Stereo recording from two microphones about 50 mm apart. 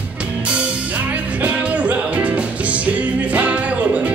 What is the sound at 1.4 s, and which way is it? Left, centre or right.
Music, right.